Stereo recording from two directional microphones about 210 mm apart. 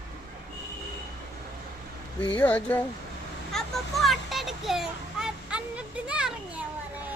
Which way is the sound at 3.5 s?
Centre (ahead or behind).